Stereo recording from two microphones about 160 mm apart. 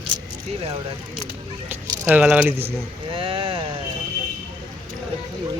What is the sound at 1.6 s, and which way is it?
Speech, 10° right (ahead or behind).